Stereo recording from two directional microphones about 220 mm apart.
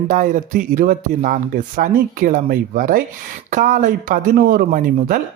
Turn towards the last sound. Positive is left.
turn(degrees=-40)  # may be behind; listen again after turning